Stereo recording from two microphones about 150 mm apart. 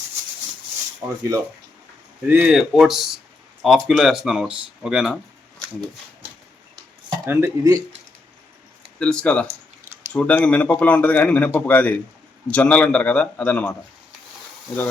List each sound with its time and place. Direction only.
1.0 s speech: 15° right (ahead or behind)
2.2 s speech: 10° right (ahead or behind)
7.3 s speech: 20° right (ahead or behind)
9.0 s speech: 5° left (ahead or behind)